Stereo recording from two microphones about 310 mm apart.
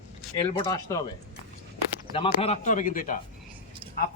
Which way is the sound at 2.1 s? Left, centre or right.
Centre.